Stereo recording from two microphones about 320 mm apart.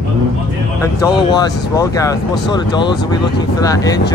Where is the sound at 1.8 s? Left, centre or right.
Centre.